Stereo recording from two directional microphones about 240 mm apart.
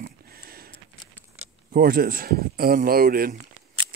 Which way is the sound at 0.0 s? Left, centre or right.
Right.